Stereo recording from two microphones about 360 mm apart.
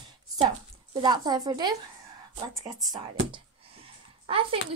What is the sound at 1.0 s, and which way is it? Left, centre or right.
Speech, centre.